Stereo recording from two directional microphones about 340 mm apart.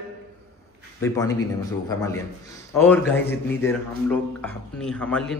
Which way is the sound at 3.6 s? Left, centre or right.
Centre.